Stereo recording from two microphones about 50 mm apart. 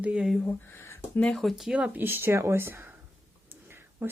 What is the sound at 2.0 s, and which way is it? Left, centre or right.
Speech, right.